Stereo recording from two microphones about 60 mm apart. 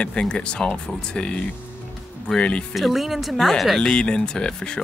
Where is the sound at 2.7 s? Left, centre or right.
Centre.